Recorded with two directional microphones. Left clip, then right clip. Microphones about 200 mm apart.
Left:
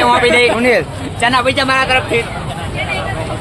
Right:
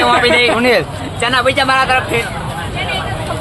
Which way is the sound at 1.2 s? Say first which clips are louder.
Even; 40° left (ahead or behind).